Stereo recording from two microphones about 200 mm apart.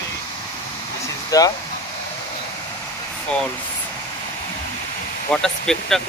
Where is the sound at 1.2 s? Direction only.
15° left (ahead or behind).